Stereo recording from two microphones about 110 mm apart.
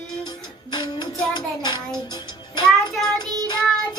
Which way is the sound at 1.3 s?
45° left (ahead or behind).